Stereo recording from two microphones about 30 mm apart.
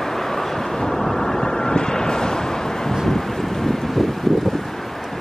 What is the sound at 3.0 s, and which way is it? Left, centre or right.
Wind, centre.